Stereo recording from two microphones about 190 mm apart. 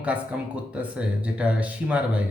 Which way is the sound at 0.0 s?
5° right (ahead or behind).